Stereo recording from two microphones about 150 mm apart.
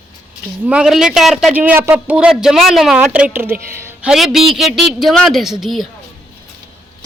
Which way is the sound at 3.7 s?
15° right (ahead or behind).